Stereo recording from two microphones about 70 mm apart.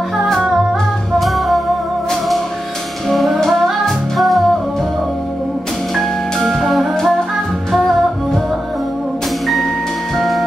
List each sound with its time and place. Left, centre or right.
0.2 s music: centre
3.1 s music: centre
5.9 s music: centre
10.1 s music: centre